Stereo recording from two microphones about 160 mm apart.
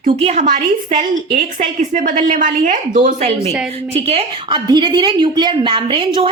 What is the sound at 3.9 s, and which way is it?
A woman's voice, 40° right (ahead or behind).